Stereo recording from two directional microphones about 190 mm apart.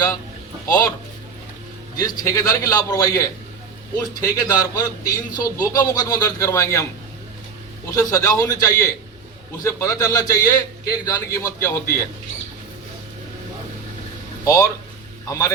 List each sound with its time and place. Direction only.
0.7 s a man's voice: 20° left (ahead or behind)
2.0 s a man's voice: 20° left (ahead or behind)
7.9 s a man's voice: 15° left (ahead or behind)
14.4 s a man's voice: 20° left (ahead or behind)